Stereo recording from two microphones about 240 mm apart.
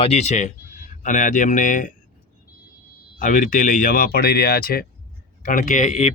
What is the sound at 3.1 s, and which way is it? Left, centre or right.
Speech, left.